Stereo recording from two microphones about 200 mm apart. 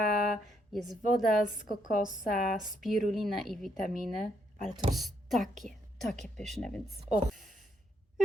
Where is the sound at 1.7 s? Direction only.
40° left (ahead or behind).